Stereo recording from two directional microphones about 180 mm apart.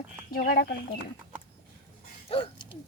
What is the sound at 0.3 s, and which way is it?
Speech, 55° left (ahead or behind).